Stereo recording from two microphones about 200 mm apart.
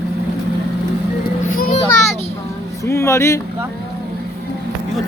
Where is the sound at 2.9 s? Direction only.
15° left (ahead or behind).